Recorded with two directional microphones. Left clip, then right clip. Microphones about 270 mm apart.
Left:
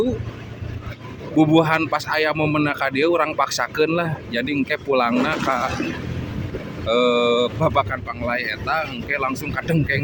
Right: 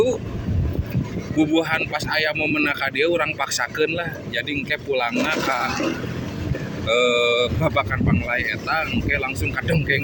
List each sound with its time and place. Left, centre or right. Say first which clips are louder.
1.4 s speech: left 4 dB; left
6.8 s speech: left 1 dB; centre